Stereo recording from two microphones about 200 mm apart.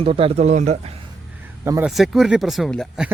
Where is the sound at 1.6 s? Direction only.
15° right (ahead or behind).